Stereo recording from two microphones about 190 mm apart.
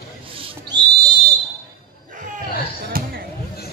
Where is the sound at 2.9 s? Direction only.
50° right (ahead or behind).